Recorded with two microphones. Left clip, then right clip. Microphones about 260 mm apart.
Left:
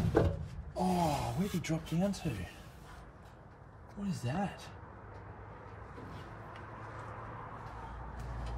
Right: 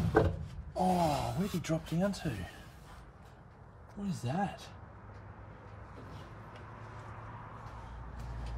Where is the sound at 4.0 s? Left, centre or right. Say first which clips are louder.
Even; right.